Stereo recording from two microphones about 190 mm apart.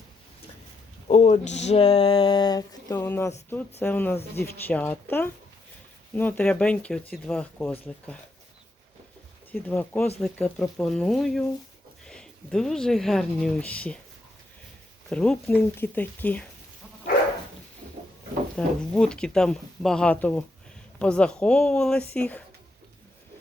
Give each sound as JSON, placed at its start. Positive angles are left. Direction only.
{"t": 1.0, "sound": "a sound", "side_deg": 40}
{"t": 2.9, "sound": "speech", "side_deg": 10}
{"t": 9.5, "sound": "speech", "side_deg": 10}
{"t": 15.1, "sound": "speech", "side_deg": 5}
{"t": 18.5, "sound": "speech", "side_deg": 5}